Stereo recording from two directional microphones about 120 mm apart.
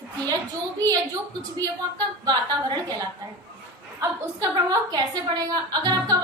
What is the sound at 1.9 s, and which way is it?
Speech, 35° right (ahead or behind).